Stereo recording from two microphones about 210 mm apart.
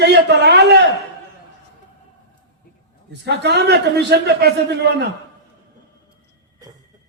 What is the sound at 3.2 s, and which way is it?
A man's voice, 50° right (ahead or behind).